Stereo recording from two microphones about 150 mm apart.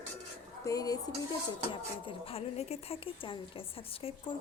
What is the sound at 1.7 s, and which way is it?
A woman's voice, 35° left (ahead or behind).